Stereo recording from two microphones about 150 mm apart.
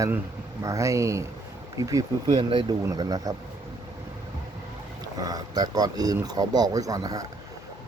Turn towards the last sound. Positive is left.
turn(degrees=-25)  # may be behind; listen again after turning